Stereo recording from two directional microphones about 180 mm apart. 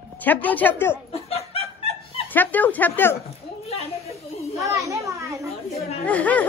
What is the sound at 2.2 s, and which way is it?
Speech, 10° left (ahead or behind).